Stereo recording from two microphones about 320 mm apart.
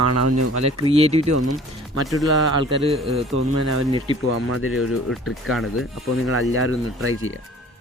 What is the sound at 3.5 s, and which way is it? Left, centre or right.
Speech, right.